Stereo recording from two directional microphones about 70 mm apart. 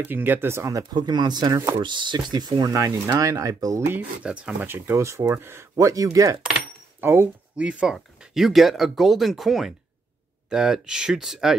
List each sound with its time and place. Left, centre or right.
0.0 s speech: right
0.9 s speech: right
2.7 s speech: right
3.8 s speech: right
4.2 s speech: centre
4.6 s speech: right
7.0 s speech: right
7.5 s speech: centre